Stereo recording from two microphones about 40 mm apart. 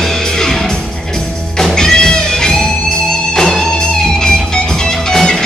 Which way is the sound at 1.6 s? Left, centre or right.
Centre.